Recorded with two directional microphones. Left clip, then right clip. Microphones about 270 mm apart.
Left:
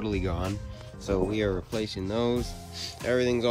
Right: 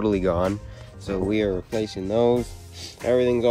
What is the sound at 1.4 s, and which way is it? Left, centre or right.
Speech, centre.